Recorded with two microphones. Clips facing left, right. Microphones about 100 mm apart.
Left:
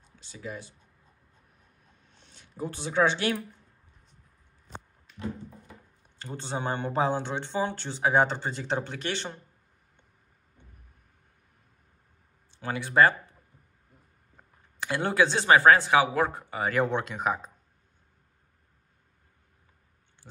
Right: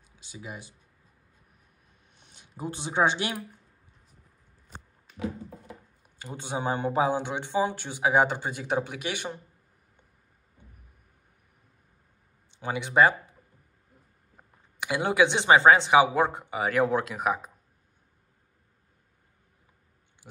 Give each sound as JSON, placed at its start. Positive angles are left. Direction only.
{"t": 0.0, "sound": "speech", "side_deg": -10}
{"t": 2.1, "sound": "speech", "side_deg": -15}
{"t": 4.7, "sound": "a sound", "side_deg": -5}
{"t": 6.0, "sound": "speech", "side_deg": -10}
{"t": 12.4, "sound": "speech", "side_deg": -15}